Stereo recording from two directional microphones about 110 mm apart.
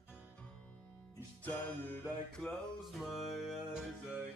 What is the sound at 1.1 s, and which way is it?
Music, 15° left (ahead or behind).